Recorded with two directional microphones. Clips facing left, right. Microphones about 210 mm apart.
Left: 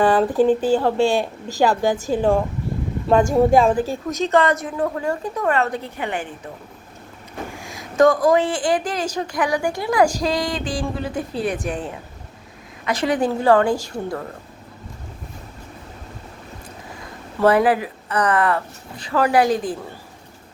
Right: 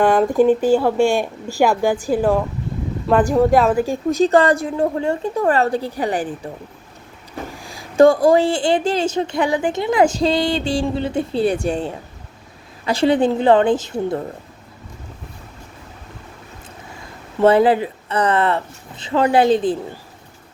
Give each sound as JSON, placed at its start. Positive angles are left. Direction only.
{"t": 0.0, "sound": "speech", "side_deg": -10}
{"t": 3.6, "sound": "speech", "side_deg": -10}
{"t": 4.1, "sound": "a woman's voice", "side_deg": -35}
{"t": 7.5, "sound": "a woman's voice", "side_deg": -35}
{"t": 17.4, "sound": "a woman's voice", "side_deg": -25}